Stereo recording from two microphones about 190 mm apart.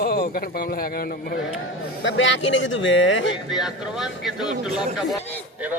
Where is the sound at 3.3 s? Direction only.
Centre (ahead or behind).